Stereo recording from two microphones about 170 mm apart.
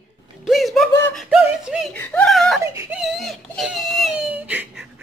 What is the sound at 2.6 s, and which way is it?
Speech, 20° right (ahead or behind).